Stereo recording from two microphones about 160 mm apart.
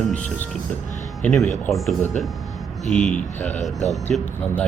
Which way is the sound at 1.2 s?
10° left (ahead or behind).